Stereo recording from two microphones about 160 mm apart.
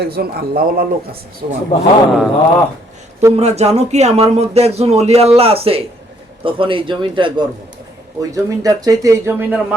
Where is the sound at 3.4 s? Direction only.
40° right (ahead or behind).